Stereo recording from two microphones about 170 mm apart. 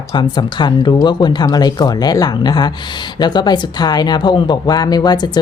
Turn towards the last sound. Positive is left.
turn(degrees=25)  # may be behind; listen again after turning